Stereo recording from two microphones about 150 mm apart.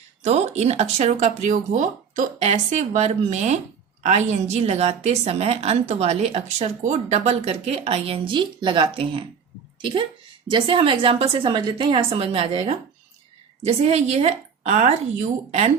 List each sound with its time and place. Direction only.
0.3 s a woman's voice: 50° right (ahead or behind)